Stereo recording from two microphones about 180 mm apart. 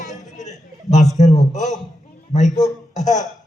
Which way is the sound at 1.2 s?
40° left (ahead or behind).